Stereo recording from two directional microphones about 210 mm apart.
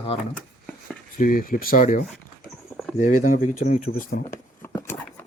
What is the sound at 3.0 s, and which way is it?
Speech, 35° left (ahead or behind).